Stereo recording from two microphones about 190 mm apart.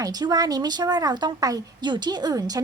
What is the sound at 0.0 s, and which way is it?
A woman's voice, 20° right (ahead or behind).